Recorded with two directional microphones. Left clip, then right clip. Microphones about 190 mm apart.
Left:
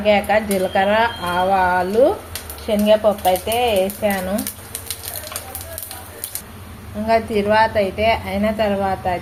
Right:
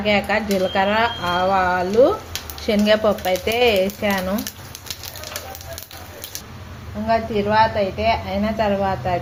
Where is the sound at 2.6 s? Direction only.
25° right (ahead or behind).